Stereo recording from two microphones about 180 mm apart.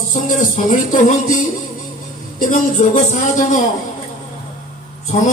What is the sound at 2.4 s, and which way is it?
Speech, 45° left (ahead or behind).